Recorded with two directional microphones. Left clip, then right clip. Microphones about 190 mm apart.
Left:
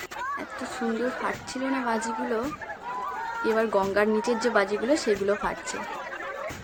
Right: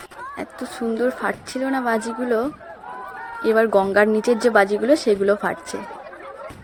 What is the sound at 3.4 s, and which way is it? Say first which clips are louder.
A woman's voice: right 8 dB; 30° right (ahead or behind).